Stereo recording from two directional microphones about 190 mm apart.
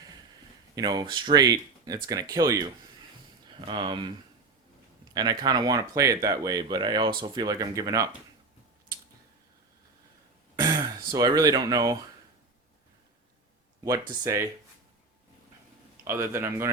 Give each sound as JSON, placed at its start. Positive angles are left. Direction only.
{"t": 0.8, "sound": "speech", "side_deg": -20}
{"t": 5.1, "sound": "speech", "side_deg": -20}
{"t": 10.6, "sound": "speech", "side_deg": -20}
{"t": 13.8, "sound": "speech", "side_deg": -15}
{"t": 16.0, "sound": "speech", "side_deg": -15}